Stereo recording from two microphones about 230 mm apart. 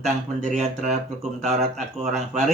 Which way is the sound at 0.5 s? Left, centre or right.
Right.